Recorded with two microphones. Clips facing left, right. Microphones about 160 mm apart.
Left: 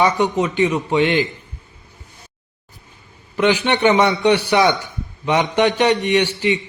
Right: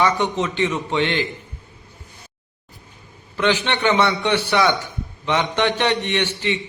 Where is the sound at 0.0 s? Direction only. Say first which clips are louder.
Left 3 dB; 15° left (ahead or behind).